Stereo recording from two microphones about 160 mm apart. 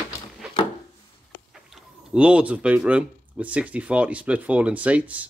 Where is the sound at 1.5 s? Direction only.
5° right (ahead or behind).